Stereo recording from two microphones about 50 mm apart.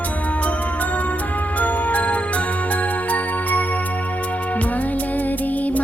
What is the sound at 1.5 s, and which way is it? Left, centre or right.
Music, left.